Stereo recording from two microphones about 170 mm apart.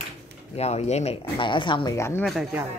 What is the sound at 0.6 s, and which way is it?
Speech, 40° left (ahead or behind).